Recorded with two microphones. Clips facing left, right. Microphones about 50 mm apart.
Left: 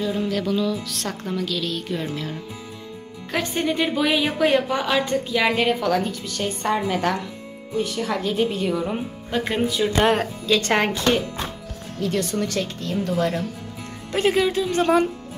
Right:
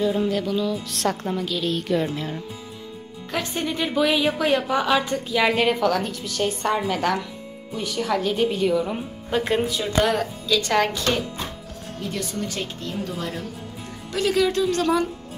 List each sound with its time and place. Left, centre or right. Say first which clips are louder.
0.1 s music: right 1 dB; centre
0.5 s a woman's voice: left 1 dB; centre
1.2 s a woman's voice: even; centre
1.7 s speech: right 4 dB; right
2.0 s a woman's voice: right 1 dB; right
3.3 s a woman's voice: left 3 dB; centre
10.0 s speech: left 3 dB; left
10.7 s speech: even; left
12.0 s speech: left 7 dB; left
12.4 s speech: left 4 dB; left
14.1 s speech: left 1 dB; left
14.5 s speech: right 1 dB; centre
14.8 s speech: left 6 dB; left